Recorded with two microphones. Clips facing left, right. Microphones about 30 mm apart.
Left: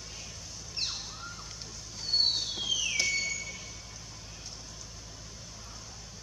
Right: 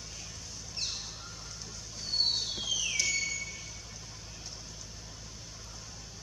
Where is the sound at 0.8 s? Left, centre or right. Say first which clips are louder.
Left 1 dB; centre.